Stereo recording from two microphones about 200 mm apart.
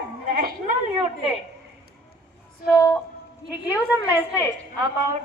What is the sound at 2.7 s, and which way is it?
Speech, 15° left (ahead or behind).